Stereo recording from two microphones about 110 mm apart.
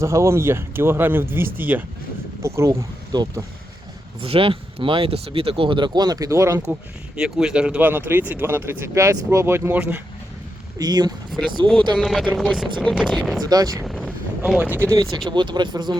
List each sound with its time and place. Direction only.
0.0 s speech: 25° right (ahead or behind)
3.1 s speech: 40° right (ahead or behind)
4.2 s speech: 55° right (ahead or behind); by 6.6 s 25° right (ahead or behind)
7.2 s speech: 5° right (ahead or behind)
10.8 s speech: 40° right (ahead or behind)
11.3 s speech: centre (ahead or behind)
13.4 s speech: 35° right (ahead or behind)
13.8 s a sound: centre (ahead or behind)
15.3 s speech: 45° right (ahead or behind)